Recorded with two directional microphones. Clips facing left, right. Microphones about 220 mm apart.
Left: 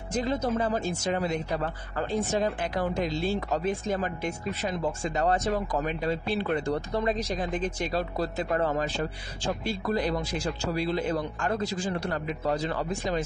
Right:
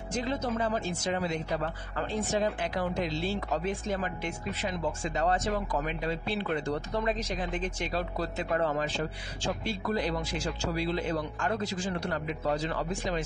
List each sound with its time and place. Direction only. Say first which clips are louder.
0.2 s speech: left 3 dB; 40° left (ahead or behind)